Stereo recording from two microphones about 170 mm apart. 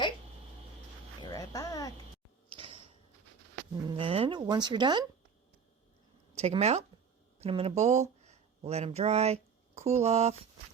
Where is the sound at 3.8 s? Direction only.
30° right (ahead or behind).